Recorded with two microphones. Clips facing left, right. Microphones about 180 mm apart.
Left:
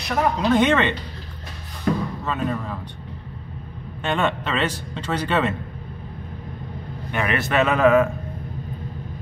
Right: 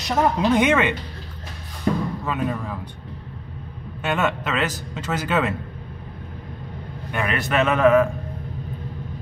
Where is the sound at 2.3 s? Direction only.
10° right (ahead or behind).